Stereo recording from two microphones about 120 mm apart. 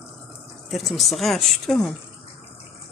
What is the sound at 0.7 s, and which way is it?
Speech, centre (ahead or behind).